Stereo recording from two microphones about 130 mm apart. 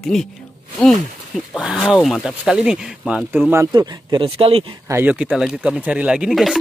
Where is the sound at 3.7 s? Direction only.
40° right (ahead or behind).